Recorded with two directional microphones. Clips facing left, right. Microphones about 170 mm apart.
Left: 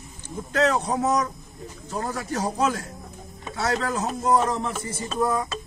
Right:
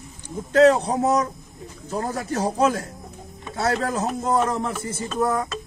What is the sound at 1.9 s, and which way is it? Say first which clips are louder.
Speech: right 3 dB; 50° right (ahead or behind).